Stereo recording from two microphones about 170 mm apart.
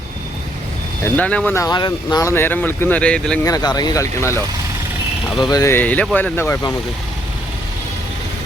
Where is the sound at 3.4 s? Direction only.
20° left (ahead or behind).